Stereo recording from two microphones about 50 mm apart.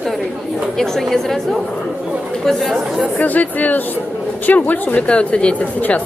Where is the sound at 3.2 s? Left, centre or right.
Left.